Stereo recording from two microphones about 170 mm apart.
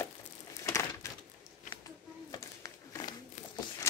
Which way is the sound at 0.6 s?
15° left (ahead or behind).